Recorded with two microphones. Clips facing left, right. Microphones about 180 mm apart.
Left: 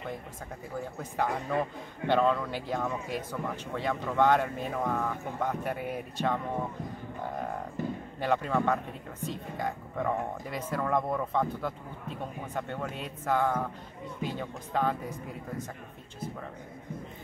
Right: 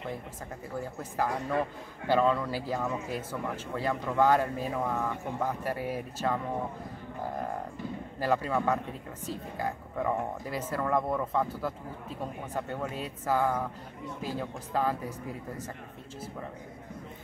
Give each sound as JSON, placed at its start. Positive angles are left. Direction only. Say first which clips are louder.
{"t": 0.7, "sound": "speech", "louder": "even", "side_deg": 0}
{"t": 8.2, "sound": "speech", "louder": "even", "side_deg": -5}